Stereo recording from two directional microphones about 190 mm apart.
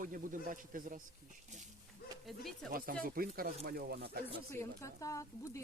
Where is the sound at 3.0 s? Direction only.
50° right (ahead or behind).